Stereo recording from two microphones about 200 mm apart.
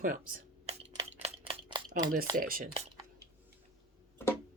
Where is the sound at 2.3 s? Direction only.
45° right (ahead or behind).